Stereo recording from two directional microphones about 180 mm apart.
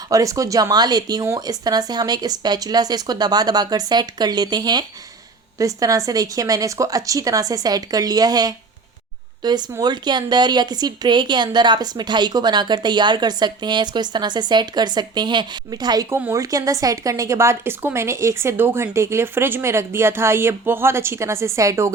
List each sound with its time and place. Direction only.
0.1 s speech: 20° right (ahead or behind)